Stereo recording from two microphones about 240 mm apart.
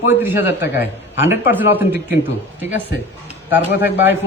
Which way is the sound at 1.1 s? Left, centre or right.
Centre.